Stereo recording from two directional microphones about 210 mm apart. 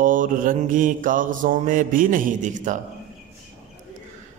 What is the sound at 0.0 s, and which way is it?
A man's voice, 40° right (ahead or behind).